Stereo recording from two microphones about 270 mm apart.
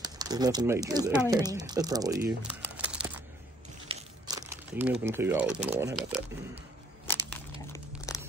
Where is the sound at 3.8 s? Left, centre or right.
Centre.